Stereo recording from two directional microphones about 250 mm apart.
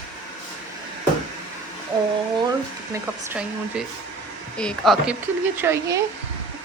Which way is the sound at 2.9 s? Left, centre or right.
Centre.